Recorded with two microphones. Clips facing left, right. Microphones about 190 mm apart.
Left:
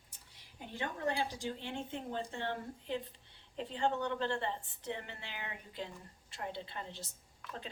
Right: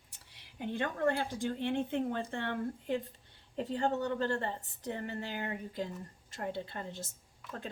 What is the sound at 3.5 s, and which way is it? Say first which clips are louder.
A woman's voice: right 3 dB; 40° right (ahead or behind).